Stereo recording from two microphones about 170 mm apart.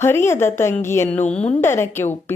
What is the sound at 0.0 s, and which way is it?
Speech, 15° left (ahead or behind).